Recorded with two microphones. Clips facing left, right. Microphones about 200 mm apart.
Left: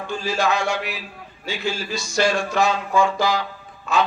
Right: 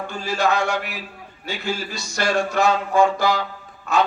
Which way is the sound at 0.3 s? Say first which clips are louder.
Right 2 dB; 60° right (ahead or behind).